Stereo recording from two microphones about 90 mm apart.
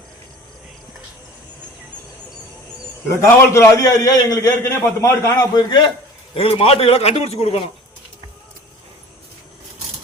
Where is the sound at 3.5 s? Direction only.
35° left (ahead or behind); by 5.9 s 55° left (ahead or behind).